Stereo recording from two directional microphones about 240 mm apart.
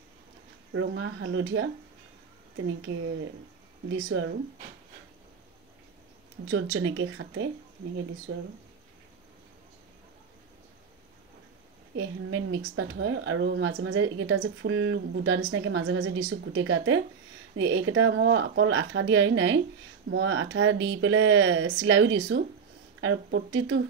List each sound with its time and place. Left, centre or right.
0.7 s speech: right
3.9 s speech: right
6.5 s speech: right
12.0 s speech: right